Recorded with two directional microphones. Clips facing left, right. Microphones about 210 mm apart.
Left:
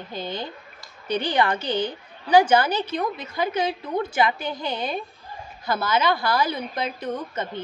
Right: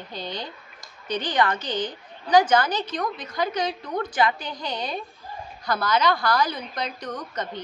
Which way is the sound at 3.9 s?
25° left (ahead or behind).